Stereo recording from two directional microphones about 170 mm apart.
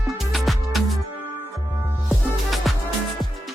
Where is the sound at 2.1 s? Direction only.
Centre (ahead or behind).